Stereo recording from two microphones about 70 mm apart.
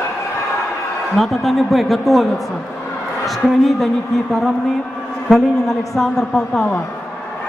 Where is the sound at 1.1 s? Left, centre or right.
Centre.